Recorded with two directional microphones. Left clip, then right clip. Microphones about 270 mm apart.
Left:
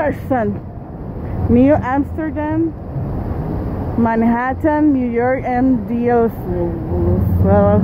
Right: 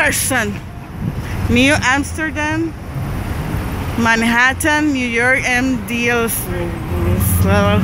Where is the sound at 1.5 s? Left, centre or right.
Centre.